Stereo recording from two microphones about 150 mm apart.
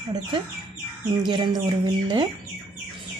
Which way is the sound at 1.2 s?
30° right (ahead or behind).